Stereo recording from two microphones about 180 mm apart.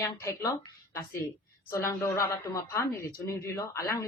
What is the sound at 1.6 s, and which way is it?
A woman's voice, 15° left (ahead or behind).